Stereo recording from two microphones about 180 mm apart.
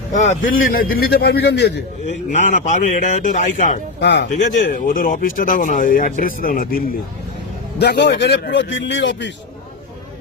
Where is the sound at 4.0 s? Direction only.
70° left (ahead or behind).